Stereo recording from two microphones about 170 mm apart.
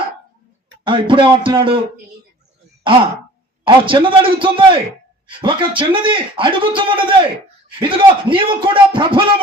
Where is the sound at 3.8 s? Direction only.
30° right (ahead or behind).